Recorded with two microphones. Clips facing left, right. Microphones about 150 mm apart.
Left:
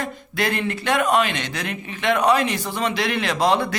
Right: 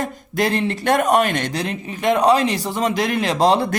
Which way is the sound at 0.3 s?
30° right (ahead or behind).